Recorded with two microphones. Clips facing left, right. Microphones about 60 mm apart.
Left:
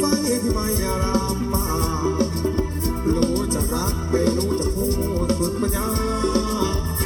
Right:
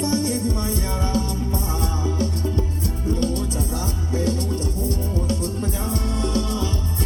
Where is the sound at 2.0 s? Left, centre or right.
Left.